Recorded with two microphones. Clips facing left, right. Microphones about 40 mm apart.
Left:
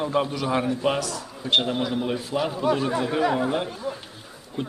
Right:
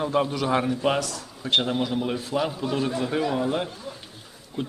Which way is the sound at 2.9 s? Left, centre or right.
Left.